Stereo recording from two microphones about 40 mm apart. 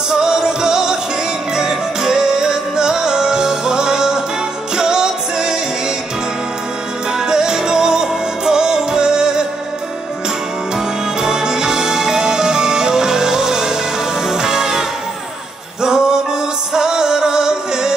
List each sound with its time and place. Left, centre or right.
0.1 s music: centre
7.2 s music: centre
11.1 s music: centre